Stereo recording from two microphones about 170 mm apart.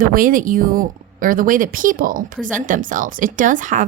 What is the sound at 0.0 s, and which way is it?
Speech, 55° right (ahead or behind).